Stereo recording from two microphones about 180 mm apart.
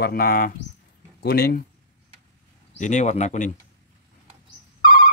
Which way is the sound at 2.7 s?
40° left (ahead or behind).